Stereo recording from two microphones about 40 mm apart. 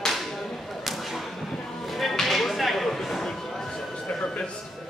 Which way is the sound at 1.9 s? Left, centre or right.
Centre.